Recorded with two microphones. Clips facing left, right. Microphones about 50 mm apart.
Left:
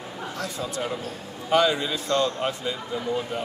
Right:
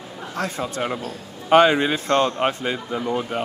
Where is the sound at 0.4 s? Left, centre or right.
Right.